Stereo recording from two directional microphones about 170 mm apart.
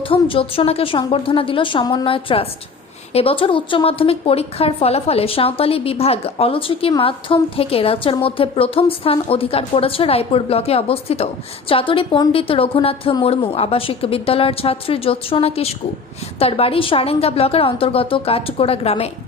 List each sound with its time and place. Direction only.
0.1 s a woman's voice: 30° left (ahead or behind)